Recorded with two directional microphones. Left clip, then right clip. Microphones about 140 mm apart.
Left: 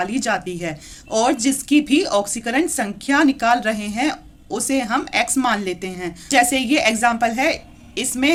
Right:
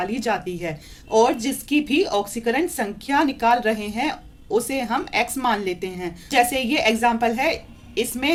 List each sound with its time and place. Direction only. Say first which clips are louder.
0.0 s a woman's voice: left 2 dB; 35° left (ahead or behind)